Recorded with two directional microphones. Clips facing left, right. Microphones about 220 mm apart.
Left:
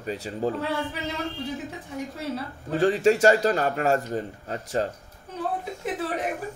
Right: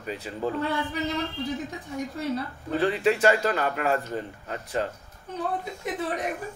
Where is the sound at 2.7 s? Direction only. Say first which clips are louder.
Left 3 dB; 45° left (ahead or behind).